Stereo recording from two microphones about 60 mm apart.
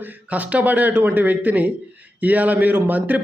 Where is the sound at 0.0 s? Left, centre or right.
Right.